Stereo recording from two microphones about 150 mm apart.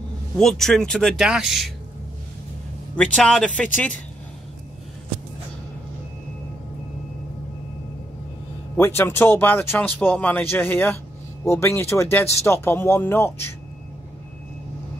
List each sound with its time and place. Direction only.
0.4 s speech: centre (ahead or behind)
3.0 s speech: 5° left (ahead or behind)
8.7 s speech: 15° left (ahead or behind)